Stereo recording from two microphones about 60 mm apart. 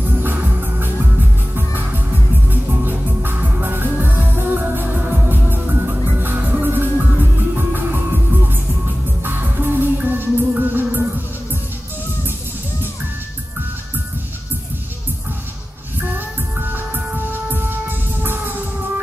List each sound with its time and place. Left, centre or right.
0.2 s music: right
9.2 s music: right
16.1 s music: right